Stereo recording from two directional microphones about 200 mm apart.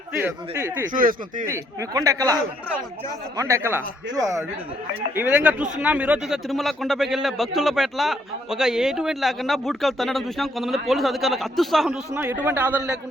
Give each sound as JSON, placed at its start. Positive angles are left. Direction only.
{"t": 0.2, "sound": "a man's voice", "side_deg": -15}
{"t": 0.9, "sound": "speech", "side_deg": -45}
{"t": 1.5, "sound": "a man's voice", "side_deg": -15}
{"t": 5.1, "sound": "a man's voice", "side_deg": -5}
{"t": 12.1, "sound": "a man's voice", "side_deg": -10}